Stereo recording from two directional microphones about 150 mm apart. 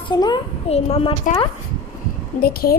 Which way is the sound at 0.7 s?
40° left (ahead or behind).